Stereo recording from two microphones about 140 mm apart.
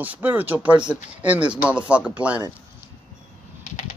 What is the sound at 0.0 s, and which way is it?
A man's voice, 10° right (ahead or behind).